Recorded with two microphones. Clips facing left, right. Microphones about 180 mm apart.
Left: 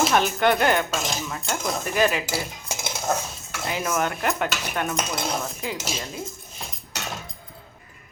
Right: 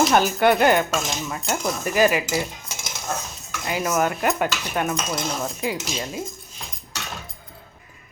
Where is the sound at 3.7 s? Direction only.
5° right (ahead or behind).